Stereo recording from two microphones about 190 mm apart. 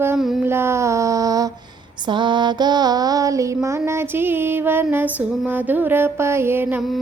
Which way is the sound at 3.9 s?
10° right (ahead or behind).